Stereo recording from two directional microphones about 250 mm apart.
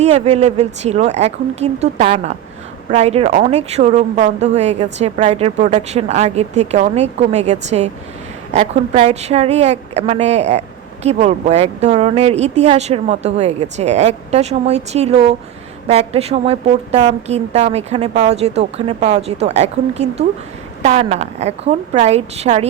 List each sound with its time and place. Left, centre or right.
0.0 s a woman's voice: right